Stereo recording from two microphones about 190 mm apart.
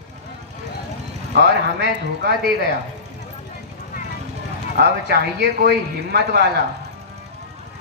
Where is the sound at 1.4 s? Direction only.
65° right (ahead or behind).